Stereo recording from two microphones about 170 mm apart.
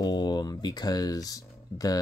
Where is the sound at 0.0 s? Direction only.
25° left (ahead or behind).